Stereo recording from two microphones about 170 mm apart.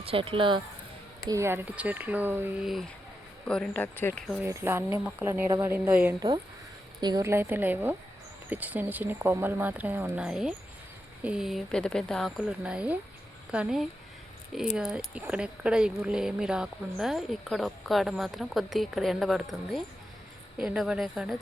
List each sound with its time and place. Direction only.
0.0 s speech: 35° right (ahead or behind)
1.3 s speech: 15° right (ahead or behind)
3.4 s speech: 5° left (ahead or behind)
4.3 s speech: 10° right (ahead or behind)
7.0 s speech: 20° right (ahead or behind); by 21.3 s centre (ahead or behind)